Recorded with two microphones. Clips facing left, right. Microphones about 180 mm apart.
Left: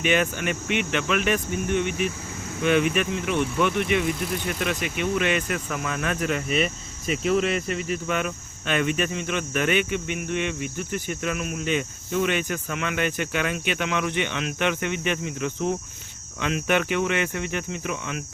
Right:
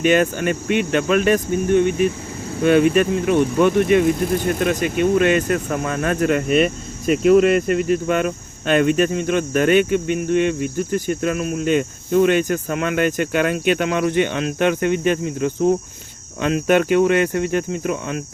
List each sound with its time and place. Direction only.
0.0 s speech: 45° right (ahead or behind)